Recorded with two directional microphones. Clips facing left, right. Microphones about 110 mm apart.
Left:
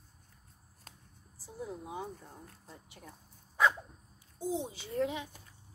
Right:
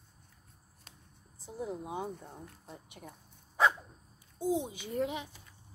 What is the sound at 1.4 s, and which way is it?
Speech, 20° right (ahead or behind).